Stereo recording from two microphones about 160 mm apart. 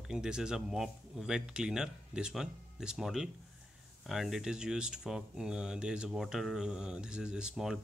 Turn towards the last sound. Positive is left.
turn(degrees=-5)  # may be behind; listen again after turning